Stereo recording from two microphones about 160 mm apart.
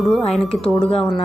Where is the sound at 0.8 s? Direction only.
35° left (ahead or behind).